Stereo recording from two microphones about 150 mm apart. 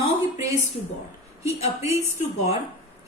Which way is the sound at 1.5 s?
45° left (ahead or behind).